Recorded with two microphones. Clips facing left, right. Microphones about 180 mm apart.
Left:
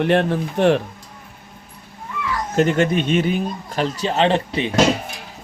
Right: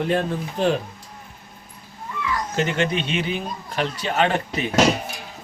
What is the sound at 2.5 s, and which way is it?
Speech, 45° left (ahead or behind).